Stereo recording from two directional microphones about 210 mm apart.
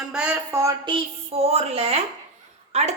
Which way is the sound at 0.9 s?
30° right (ahead or behind).